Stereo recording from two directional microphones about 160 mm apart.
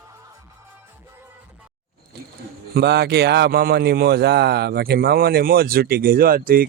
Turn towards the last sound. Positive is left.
turn(degrees=-65)  # may be behind; listen again after turning